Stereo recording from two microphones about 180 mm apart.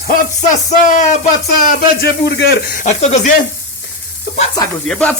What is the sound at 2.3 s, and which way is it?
Speech, 70° left (ahead or behind).